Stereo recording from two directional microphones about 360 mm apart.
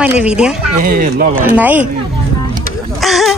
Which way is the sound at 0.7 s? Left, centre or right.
Right.